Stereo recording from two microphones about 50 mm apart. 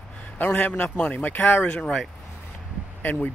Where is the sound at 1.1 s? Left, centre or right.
Left.